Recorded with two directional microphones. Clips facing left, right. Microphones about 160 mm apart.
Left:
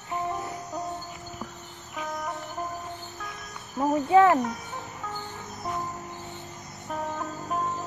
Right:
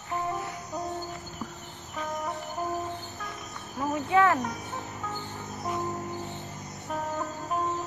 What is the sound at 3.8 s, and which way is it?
Speech, 30° left (ahead or behind).